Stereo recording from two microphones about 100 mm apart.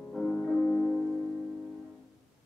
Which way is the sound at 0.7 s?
20° left (ahead or behind).